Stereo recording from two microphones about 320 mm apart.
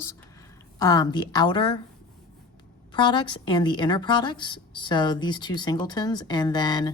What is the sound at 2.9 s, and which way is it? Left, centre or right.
A woman's voice, centre.